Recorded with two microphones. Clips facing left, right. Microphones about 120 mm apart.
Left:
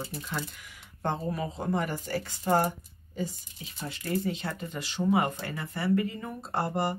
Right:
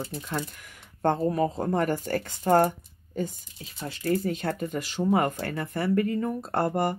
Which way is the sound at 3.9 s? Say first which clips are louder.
Right 4 dB; 40° right (ahead or behind).